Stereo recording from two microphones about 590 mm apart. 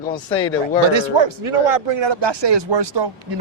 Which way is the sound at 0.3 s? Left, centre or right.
Left.